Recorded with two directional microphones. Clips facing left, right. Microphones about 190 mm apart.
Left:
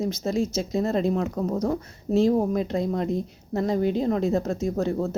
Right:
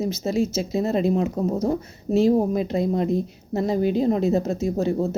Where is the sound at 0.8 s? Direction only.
15° right (ahead or behind).